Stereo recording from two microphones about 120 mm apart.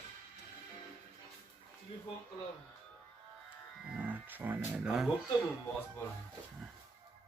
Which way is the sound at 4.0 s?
15° right (ahead or behind).